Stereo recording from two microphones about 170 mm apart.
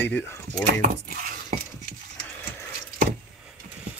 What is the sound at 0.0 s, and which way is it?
Speech, 15° left (ahead or behind).